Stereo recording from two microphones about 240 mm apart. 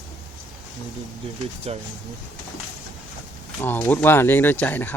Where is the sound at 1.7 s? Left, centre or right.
Right.